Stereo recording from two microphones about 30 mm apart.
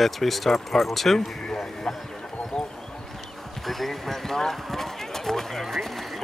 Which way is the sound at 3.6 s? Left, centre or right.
Centre.